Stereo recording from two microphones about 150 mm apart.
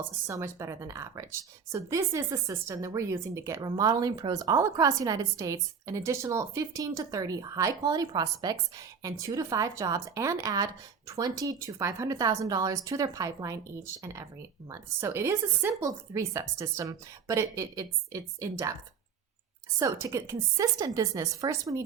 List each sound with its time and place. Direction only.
0.0 s speech: 20° right (ahead or behind)
19.8 s speech: 20° right (ahead or behind)